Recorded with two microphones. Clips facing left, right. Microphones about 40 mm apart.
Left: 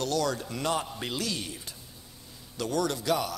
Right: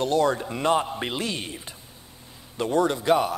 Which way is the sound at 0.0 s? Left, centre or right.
Right.